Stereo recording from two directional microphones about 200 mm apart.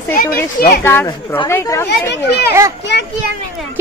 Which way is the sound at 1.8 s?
60° left (ahead or behind).